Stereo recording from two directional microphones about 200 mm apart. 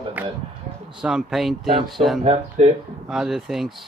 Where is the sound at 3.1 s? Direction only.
Centre (ahead or behind).